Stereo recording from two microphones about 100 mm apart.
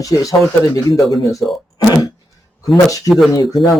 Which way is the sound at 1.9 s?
40° left (ahead or behind).